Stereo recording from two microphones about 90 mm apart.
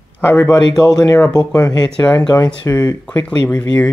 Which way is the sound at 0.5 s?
45° left (ahead or behind).